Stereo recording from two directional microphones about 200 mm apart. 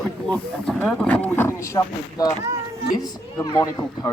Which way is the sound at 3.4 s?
15° left (ahead or behind).